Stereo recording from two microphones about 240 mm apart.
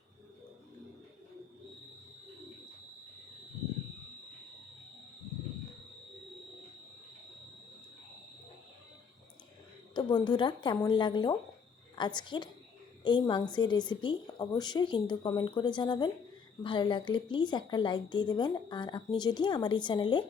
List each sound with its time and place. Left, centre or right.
9.9 s a woman's voice: centre